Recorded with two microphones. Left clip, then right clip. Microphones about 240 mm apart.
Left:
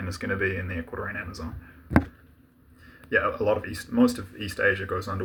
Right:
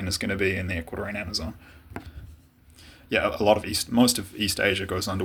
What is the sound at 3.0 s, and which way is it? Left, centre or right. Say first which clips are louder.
Speech: right 2 dB; right.